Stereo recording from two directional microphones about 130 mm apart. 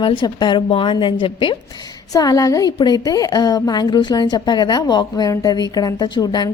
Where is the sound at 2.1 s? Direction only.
25° left (ahead or behind).